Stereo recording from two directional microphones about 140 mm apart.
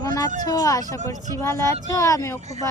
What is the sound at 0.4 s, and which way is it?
Speech, 25° left (ahead or behind).